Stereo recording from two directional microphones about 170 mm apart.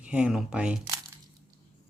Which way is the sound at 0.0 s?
5° right (ahead or behind).